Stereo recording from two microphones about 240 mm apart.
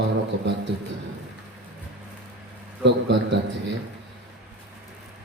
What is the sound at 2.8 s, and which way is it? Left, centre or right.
Speech, right.